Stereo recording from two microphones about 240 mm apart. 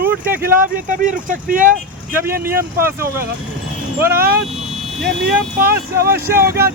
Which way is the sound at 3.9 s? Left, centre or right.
Centre.